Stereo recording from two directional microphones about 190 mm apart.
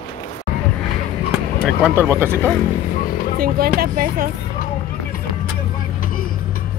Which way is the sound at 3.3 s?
50° right (ahead or behind).